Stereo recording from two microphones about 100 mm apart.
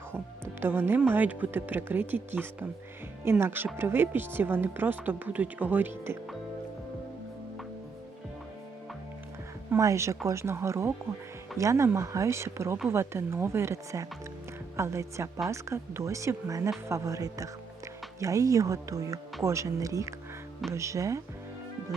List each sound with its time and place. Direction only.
0.6 s speech: 20° right (ahead or behind)
9.6 s speech: 30° right (ahead or behind)